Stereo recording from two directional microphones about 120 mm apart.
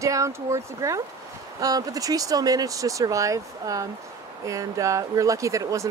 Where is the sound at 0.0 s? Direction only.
25° right (ahead or behind).